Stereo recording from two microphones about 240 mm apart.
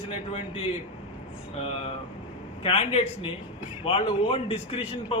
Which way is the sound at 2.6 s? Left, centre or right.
Left.